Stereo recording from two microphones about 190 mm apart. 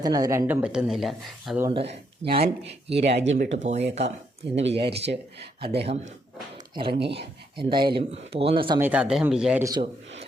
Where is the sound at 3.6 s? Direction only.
35° right (ahead or behind).